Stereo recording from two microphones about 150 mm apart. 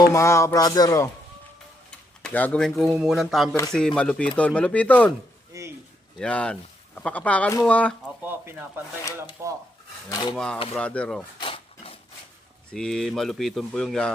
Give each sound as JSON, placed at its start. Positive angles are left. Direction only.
{"t": 0.1, "sound": "speech", "side_deg": 20}
{"t": 2.2, "sound": "speech", "side_deg": 10}
{"t": 5.5, "sound": "a sound", "side_deg": -20}
{"t": 6.1, "sound": "speech", "side_deg": 5}
{"t": 8.0, "sound": "speech", "side_deg": -10}
{"t": 10.1, "sound": "speech", "side_deg": 30}
{"t": 10.3, "sound": "speech", "side_deg": 5}
{"t": 11.3, "sound": "a sound", "side_deg": 35}
{"t": 12.7, "sound": "speech", "side_deg": 5}